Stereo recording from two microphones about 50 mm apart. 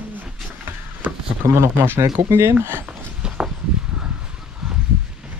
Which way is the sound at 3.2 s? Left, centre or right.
Centre.